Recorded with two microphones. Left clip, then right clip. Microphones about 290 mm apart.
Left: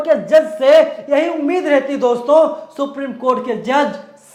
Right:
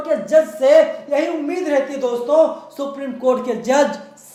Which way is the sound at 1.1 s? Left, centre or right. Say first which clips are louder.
Left 6 dB; left.